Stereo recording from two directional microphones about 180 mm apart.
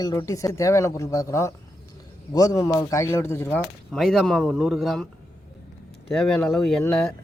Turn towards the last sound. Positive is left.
turn(degrees=5)  # may be behind; listen again after turning